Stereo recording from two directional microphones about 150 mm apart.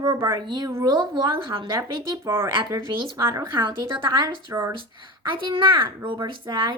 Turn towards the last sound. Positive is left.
turn(degrees=-35)  # may be behind; listen again after turning